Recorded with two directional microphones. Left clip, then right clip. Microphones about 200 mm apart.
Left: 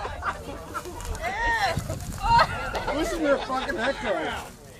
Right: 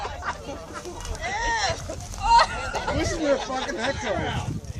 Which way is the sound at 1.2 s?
45° right (ahead or behind).